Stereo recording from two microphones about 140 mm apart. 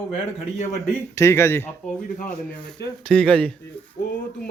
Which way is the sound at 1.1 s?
20° left (ahead or behind).